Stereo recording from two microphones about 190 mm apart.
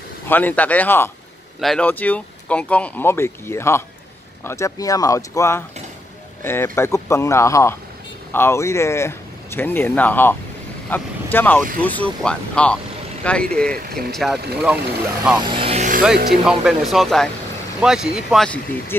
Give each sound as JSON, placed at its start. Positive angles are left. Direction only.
{"t": 0.3, "sound": "speech", "side_deg": 10}
{"t": 15.3, "sound": "speech", "side_deg": -30}
{"t": 16.3, "sound": "speech", "side_deg": 0}